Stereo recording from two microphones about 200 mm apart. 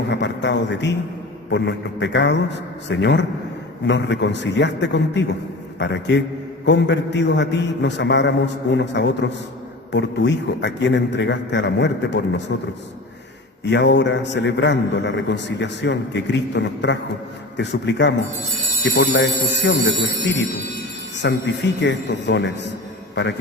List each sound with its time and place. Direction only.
0.1 s a man's voice: 60° left (ahead or behind)
13.7 s a man's voice: 60° left (ahead or behind)